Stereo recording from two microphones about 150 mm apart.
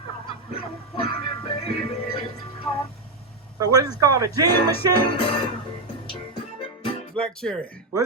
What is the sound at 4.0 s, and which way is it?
Speech, 25° right (ahead or behind).